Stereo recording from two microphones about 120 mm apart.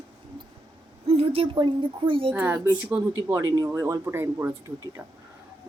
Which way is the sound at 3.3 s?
30° right (ahead or behind).